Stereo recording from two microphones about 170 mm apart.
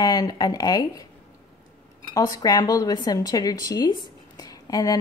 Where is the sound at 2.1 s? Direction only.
20° left (ahead or behind).